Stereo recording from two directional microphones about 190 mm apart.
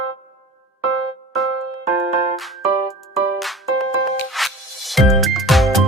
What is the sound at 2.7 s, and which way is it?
Music, 30° right (ahead or behind).